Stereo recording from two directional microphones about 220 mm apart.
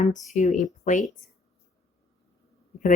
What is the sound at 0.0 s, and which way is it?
Speech, 30° left (ahead or behind).